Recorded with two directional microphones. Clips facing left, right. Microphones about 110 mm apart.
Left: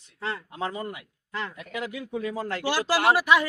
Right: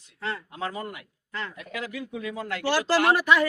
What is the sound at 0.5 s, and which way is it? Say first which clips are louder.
Speech: left 1 dB; 25° left (ahead or behind).